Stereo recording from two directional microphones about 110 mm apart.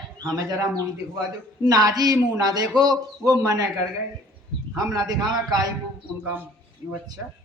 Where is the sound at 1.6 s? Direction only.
35° right (ahead or behind).